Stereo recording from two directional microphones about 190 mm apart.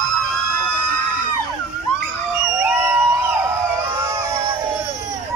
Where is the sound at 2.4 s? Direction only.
15° right (ahead or behind).